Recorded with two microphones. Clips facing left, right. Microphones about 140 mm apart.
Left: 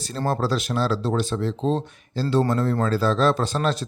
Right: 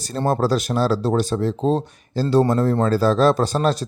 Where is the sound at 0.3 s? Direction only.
40° right (ahead or behind).